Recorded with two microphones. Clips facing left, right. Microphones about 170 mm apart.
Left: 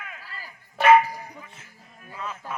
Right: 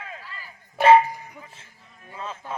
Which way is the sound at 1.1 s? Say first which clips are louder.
Even; 35° left (ahead or behind).